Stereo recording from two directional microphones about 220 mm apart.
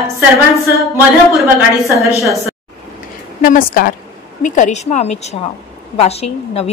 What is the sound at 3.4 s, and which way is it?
A woman's voice, 40° left (ahead or behind).